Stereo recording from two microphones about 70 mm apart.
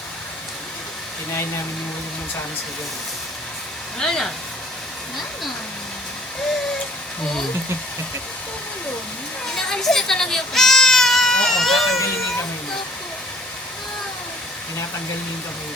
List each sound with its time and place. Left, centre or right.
3.9 s speech: centre
9.6 s speech: centre
11.9 s speech: left